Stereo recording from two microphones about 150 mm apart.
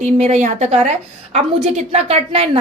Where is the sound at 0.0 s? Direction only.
50° right (ahead or behind).